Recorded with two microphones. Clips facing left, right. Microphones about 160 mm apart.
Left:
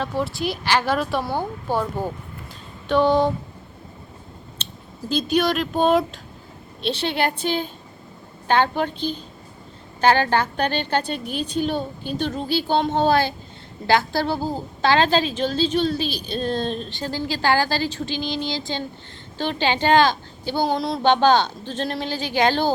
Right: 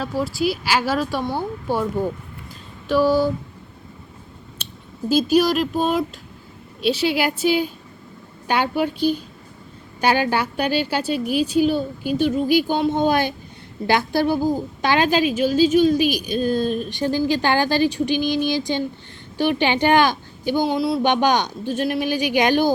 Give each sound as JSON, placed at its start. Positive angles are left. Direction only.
{"t": 0.0, "sound": "speech", "side_deg": -5}
{"t": 2.9, "sound": "speech", "side_deg": -5}
{"t": 4.5, "sound": "a woman's voice", "side_deg": -10}
{"t": 20.7, "sound": "speech", "side_deg": -5}
{"t": 21.0, "sound": "a woman's voice", "side_deg": -15}